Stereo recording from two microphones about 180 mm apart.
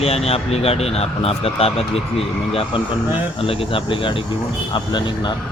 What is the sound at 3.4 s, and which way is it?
Speech, 30° left (ahead or behind).